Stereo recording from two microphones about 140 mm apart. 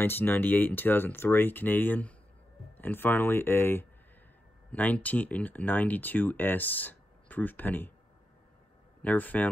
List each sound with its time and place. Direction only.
0.0 s speech: 15° left (ahead or behind)
9.0 s speech: 10° left (ahead or behind)